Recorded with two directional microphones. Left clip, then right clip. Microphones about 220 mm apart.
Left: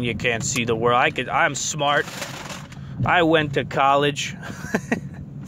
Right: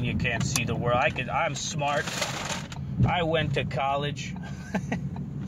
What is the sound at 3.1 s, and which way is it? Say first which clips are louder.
Speech: left 9 dB; 45° left (ahead or behind).